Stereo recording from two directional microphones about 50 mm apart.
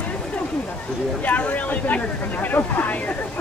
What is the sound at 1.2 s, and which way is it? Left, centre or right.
Speech, left.